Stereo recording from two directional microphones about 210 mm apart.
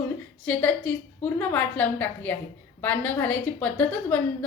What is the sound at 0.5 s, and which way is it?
A woman's voice, 5° left (ahead or behind).